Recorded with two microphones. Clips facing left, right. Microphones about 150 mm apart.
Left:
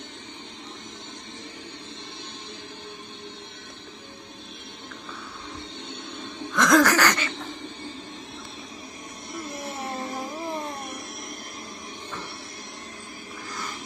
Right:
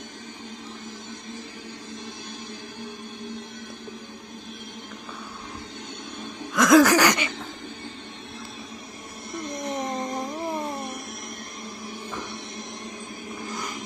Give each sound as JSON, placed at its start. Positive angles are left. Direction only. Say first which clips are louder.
{"t": 6.5, "sound": "laughter", "louder": "right 3 dB", "side_deg": -5}
{"t": 9.3, "sound": "a sound", "louder": "right 3 dB", "side_deg": 5}
{"t": 9.9, "sound": "music", "louder": "right 3 dB", "side_deg": 5}